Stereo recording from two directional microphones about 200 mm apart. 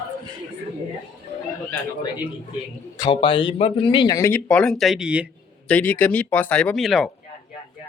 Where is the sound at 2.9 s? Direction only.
25° left (ahead or behind); by 5.2 s 5° right (ahead or behind).